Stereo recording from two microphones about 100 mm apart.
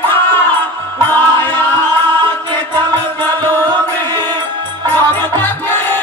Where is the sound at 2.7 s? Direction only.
20° left (ahead or behind).